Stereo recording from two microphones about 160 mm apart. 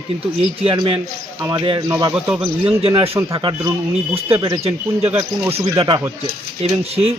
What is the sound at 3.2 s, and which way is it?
Speech, 20° right (ahead or behind).